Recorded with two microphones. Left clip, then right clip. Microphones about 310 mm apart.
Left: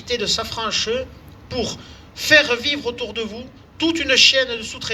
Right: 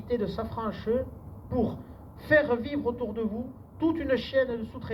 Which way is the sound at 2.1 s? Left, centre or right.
Left.